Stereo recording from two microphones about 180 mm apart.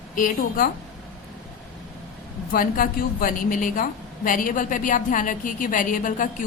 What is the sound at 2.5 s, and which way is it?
A woman's voice, 50° left (ahead or behind).